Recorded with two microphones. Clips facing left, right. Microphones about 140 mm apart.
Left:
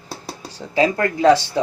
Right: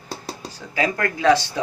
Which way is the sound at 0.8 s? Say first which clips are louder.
Left 5 dB; 30° left (ahead or behind).